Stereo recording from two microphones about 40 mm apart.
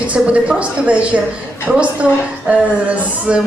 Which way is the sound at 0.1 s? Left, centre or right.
Right.